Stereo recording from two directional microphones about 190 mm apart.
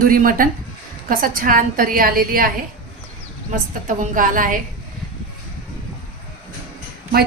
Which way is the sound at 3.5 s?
45° right (ahead or behind).